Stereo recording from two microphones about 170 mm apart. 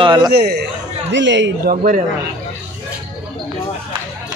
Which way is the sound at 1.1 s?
90° right.